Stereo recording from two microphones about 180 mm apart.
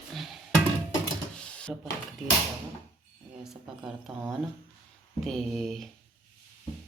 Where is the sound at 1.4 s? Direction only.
5° left (ahead or behind).